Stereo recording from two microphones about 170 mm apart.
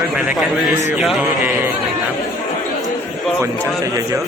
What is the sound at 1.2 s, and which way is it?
Speech, 10° right (ahead or behind).